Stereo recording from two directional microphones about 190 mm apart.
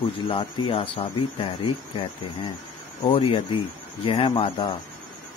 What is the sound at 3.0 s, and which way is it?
Speech, 25° left (ahead or behind).